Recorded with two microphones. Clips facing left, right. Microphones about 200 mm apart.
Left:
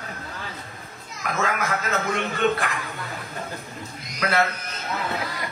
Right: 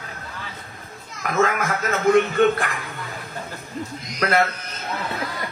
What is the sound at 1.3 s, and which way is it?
Chuckle, 50° right (ahead or behind).